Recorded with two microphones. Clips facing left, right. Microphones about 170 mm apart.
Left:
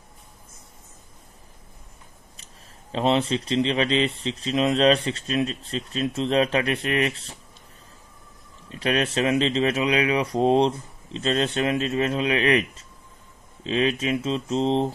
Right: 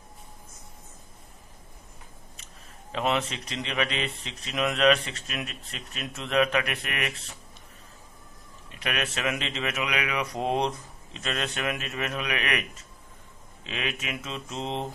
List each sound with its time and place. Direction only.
2.3 s speech: 35° left (ahead or behind)
8.6 s speech: 30° left (ahead or behind)